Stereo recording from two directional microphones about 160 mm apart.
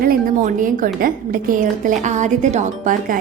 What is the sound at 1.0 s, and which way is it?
Speech, 60° right (ahead or behind).